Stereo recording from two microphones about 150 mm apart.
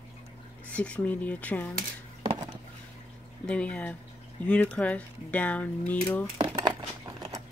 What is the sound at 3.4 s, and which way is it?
Speech, 5° left (ahead or behind).